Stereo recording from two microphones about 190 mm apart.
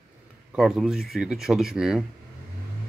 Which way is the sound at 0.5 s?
Centre (ahead or behind).